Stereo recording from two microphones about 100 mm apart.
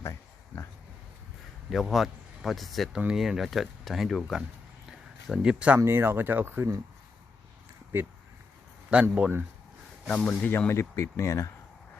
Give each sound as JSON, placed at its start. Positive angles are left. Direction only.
{"t": 0.0, "sound": "a sound", "side_deg": 30}
{"t": 1.7, "sound": "speech", "side_deg": 0}
{"t": 4.9, "sound": "a sound", "side_deg": -5}
{"t": 5.8, "sound": "speech", "side_deg": -25}
{"t": 8.9, "sound": "a man's voice", "side_deg": -10}
{"t": 10.1, "sound": "speech", "side_deg": 15}